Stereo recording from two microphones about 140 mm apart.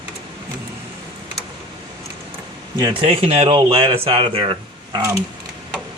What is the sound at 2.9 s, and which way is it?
Speech, 45° right (ahead or behind).